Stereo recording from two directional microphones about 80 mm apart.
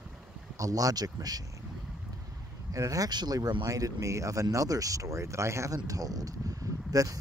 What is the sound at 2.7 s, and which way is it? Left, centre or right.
Speech, right.